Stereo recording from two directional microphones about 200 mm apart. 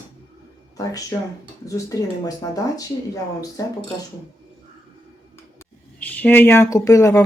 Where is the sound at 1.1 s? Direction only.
15° left (ahead or behind).